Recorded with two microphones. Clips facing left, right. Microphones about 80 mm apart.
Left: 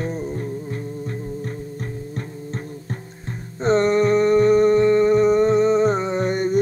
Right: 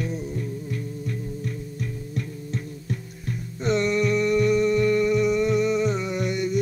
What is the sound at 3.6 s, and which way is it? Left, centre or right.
Music, left.